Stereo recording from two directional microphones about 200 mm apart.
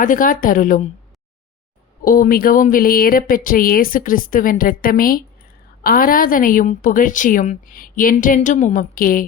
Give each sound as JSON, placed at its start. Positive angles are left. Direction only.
{"t": 0.0, "sound": "speech", "side_deg": 40}
{"t": 2.0, "sound": "a woman's voice", "side_deg": 45}